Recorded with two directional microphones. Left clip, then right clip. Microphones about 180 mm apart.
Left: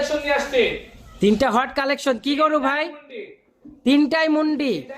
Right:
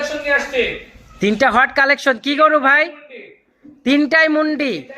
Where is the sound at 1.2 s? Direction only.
10° left (ahead or behind).